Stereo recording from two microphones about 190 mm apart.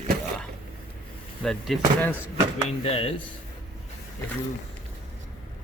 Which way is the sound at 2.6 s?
30° left (ahead or behind).